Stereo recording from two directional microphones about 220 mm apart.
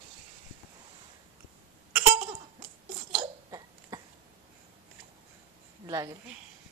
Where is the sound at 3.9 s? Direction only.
15° right (ahead or behind).